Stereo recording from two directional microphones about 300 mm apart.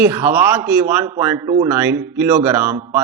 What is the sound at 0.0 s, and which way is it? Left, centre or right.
A man's voice, centre.